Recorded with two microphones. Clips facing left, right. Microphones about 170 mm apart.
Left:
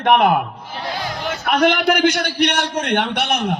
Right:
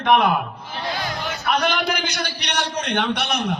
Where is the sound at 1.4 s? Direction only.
55° left (ahead or behind).